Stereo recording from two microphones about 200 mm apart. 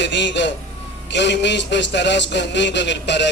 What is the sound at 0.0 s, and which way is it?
Speech, 60° left (ahead or behind).